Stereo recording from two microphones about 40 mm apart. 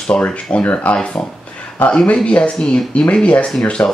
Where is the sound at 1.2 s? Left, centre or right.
Left.